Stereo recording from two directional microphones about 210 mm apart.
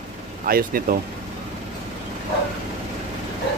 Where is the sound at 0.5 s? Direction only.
45° right (ahead or behind).